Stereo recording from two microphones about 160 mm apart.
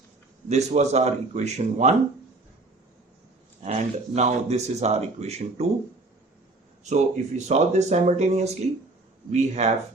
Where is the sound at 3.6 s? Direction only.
45° right (ahead or behind).